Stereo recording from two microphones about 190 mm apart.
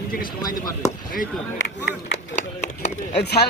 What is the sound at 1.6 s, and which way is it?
A man's voice, 65° left (ahead or behind).